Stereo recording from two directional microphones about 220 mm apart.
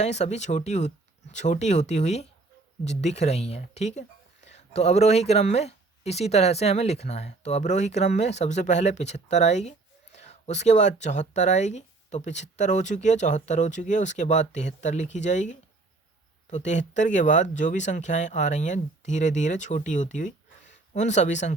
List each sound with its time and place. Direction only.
0.0 s speech: 30° left (ahead or behind)